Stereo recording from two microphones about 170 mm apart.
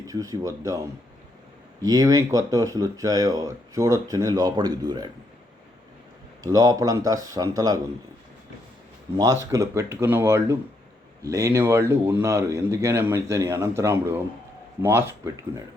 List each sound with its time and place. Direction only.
0.1 s speech: 20° right (ahead or behind)
1.8 s speech: 20° right (ahead or behind)
6.4 s speech: 20° right (ahead or behind)
9.1 s a man's voice: 20° right (ahead or behind)